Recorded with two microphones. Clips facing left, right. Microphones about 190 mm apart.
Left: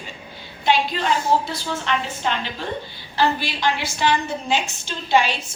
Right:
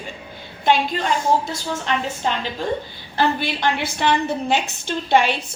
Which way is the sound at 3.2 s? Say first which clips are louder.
Right 1 dB; 55° right (ahead or behind).